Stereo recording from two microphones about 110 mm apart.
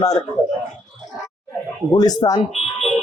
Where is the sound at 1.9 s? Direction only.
35° left (ahead or behind).